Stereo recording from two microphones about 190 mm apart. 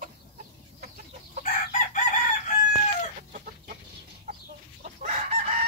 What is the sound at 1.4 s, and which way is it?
Chicken, 45° left (ahead or behind).